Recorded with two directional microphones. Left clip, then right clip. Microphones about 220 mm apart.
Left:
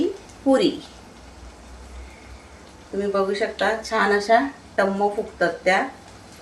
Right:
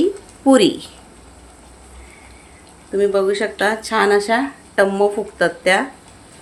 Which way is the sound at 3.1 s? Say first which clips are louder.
Right 5 dB; 50° right (ahead or behind).